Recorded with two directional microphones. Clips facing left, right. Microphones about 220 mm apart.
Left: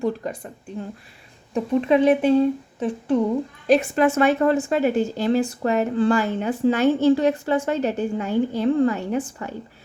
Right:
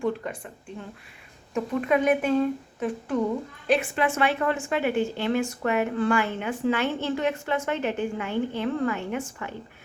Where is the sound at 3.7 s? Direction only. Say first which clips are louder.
Left 6 dB; 40° left (ahead or behind).